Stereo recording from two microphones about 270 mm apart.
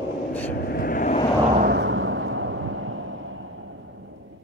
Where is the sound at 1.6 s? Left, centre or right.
Right.